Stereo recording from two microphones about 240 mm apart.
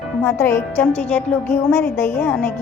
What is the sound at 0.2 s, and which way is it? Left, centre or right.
A woman's voice, centre.